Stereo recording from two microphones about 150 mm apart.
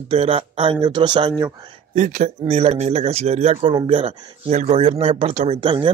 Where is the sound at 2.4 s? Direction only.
40° right (ahead or behind).